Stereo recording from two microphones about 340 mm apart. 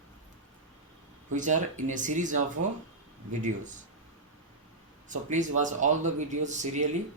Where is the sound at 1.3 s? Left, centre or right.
Right.